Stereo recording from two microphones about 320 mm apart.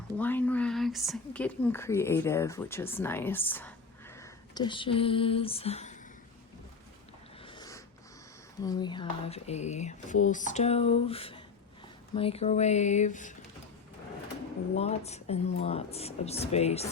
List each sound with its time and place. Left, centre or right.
0.2 s speech: centre; by 6.0 s left
7.4 s dog: centre
8.6 s speech: centre
14.8 s speech: centre